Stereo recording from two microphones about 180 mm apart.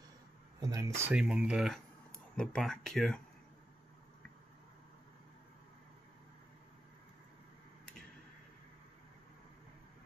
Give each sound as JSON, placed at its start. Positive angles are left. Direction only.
{"t": 0.6, "sound": "speech", "side_deg": -20}